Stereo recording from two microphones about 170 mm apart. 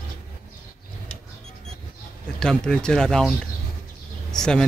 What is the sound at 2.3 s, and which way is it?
Speech, 5° left (ahead or behind).